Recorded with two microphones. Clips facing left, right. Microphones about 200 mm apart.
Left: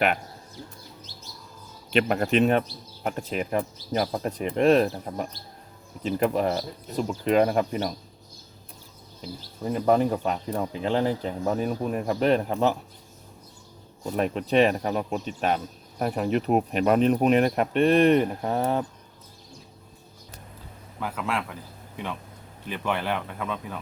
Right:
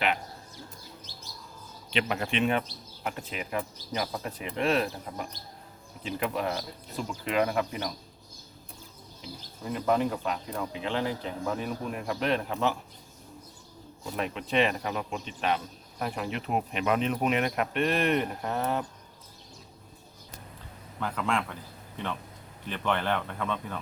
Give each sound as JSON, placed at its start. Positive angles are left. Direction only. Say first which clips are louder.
{"t": 1.9, "sound": "speech", "louder": "left 7 dB", "side_deg": 45}
{"t": 9.6, "sound": "speech", "louder": "left 5 dB", "side_deg": 40}
{"t": 14.0, "sound": "speech", "louder": "left 7 dB", "side_deg": 40}
{"t": 21.0, "sound": "speech", "louder": "even", "side_deg": 5}
{"t": 22.7, "sound": "speech", "louder": "left 1 dB", "side_deg": 10}